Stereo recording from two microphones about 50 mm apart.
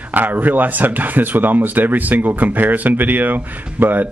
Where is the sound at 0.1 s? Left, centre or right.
Right.